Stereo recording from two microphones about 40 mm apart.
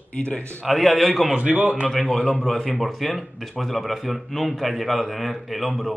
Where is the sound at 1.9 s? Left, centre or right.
Centre.